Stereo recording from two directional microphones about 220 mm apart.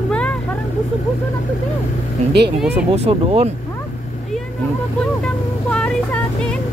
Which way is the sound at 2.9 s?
30° right (ahead or behind).